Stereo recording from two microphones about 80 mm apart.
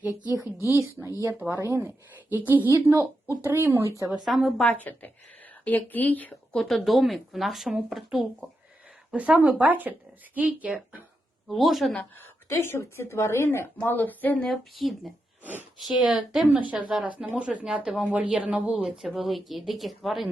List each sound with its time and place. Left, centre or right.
0.6 s a woman's voice: right
4.3 s speech: centre
4.6 s speech: left
6.5 s speech: centre
9.1 s speech: centre
11.4 s speech: centre
12.5 s a woman's voice: left
14.4 s speech: centre
19.0 s speech: centre